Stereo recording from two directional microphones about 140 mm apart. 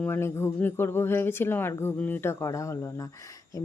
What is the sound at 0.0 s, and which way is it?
Speech, 15° left (ahead or behind).